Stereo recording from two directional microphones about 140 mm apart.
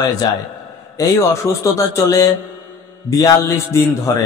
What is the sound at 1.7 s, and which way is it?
Speech, 25° left (ahead or behind).